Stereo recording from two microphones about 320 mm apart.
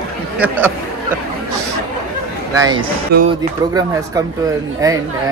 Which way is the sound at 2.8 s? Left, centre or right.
Right.